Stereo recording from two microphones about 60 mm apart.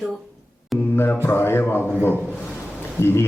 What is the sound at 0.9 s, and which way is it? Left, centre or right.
Music, left.